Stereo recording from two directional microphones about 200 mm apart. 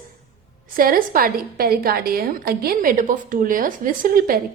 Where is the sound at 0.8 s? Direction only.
45° right (ahead or behind).